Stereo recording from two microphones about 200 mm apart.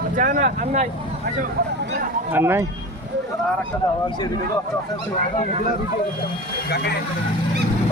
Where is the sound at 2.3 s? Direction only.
10° right (ahead or behind).